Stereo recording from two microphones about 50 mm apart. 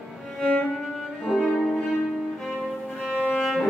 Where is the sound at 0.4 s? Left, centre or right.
Centre.